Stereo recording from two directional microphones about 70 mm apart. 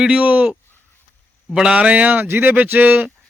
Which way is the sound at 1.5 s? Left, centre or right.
Centre.